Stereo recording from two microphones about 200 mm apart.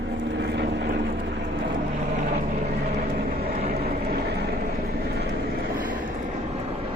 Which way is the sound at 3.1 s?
50° right (ahead or behind).